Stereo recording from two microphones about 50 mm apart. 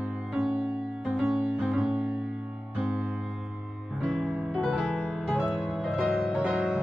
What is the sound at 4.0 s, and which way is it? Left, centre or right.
Music, centre.